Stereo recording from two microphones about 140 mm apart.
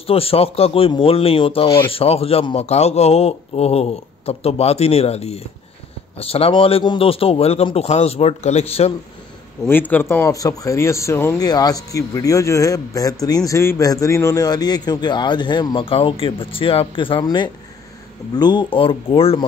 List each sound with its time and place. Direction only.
0.0 s speech: 45° left (ahead or behind)
9.7 s a man's voice: 15° left (ahead or behind); by 19.4 s 40° left (ahead or behind)